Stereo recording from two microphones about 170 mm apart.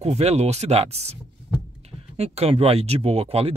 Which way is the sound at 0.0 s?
40° right (ahead or behind).